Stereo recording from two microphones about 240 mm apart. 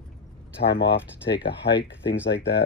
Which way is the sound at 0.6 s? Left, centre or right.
Left.